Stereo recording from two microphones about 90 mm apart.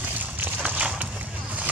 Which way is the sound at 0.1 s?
20° right (ahead or behind).